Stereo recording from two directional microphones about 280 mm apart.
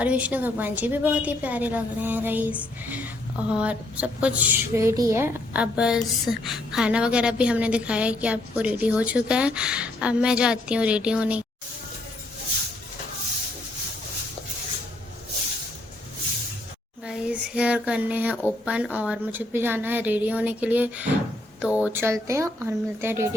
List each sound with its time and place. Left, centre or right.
0.0 s a woman's voice: centre
17.1 s a woman's voice: centre